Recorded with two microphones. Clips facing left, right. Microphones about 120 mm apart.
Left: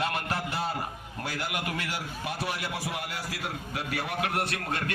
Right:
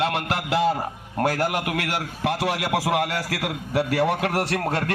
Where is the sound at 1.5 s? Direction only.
75° right (ahead or behind).